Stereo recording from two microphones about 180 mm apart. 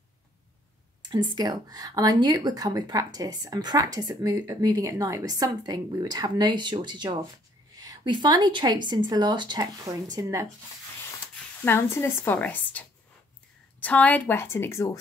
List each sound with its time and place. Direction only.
1.1 s speech: 25° right (ahead or behind)
11.6 s a woman's voice: 15° left (ahead or behind)